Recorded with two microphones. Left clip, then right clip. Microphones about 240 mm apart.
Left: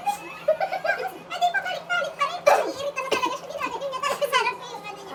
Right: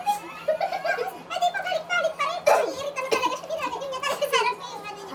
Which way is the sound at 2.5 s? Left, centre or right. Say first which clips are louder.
Left 1 dB; centre.